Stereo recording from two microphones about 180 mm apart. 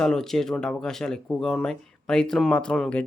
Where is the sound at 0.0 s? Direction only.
Centre (ahead or behind).